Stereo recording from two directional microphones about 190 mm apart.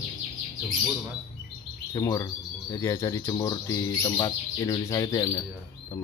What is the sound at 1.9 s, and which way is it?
Speech, 20° left (ahead or behind).